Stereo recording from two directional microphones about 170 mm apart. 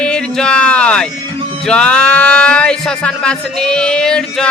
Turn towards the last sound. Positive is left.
turn(degrees=5)  # may be behind; listen again after turning